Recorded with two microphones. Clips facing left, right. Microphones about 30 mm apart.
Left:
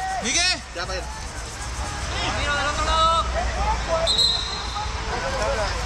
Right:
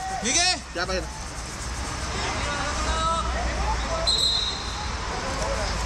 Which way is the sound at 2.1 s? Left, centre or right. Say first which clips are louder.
Left 5 dB; left.